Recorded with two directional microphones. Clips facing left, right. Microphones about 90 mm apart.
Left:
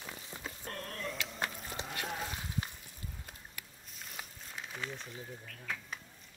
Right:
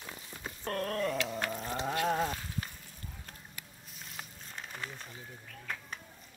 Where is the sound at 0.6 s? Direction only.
60° right (ahead or behind).